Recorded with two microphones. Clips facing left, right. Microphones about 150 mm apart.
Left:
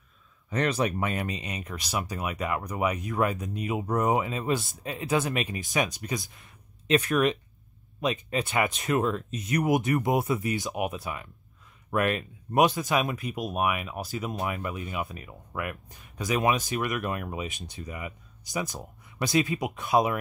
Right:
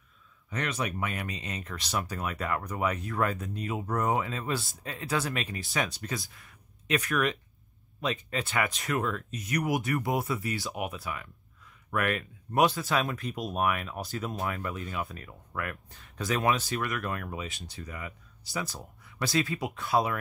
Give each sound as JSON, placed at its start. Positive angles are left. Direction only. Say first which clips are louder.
{"t": 0.5, "sound": "speech", "louder": "left 6 dB", "side_deg": 35}